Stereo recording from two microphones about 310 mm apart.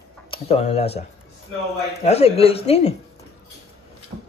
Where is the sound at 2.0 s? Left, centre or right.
Centre.